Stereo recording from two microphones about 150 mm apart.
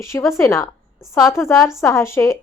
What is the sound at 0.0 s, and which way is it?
Speech, 20° left (ahead or behind).